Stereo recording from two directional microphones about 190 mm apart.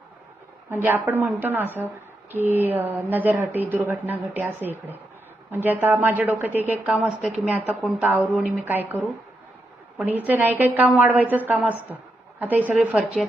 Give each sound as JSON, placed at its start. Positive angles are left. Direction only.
{"t": 0.7, "sound": "a woman's voice", "side_deg": -10}